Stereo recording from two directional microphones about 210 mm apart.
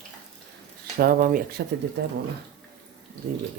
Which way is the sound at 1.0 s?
45° right (ahead or behind).